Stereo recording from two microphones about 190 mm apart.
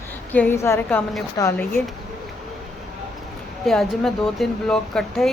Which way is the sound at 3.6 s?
Centre (ahead or behind).